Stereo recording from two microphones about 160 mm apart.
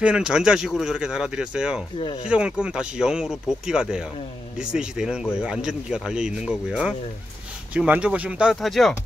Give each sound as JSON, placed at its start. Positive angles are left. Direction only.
{"t": 0.0, "sound": "speech", "side_deg": -5}
{"t": 2.0, "sound": "speech", "side_deg": 35}
{"t": 2.2, "sound": "speech", "side_deg": -5}